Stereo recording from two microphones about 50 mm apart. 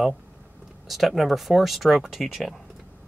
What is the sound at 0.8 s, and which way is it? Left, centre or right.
Speech, centre.